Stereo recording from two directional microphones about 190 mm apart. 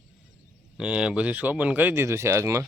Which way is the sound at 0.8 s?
5° right (ahead or behind).